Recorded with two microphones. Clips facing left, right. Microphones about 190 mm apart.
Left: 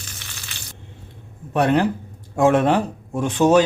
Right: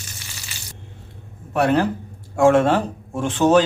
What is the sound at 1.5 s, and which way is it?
Speech, 20° left (ahead or behind).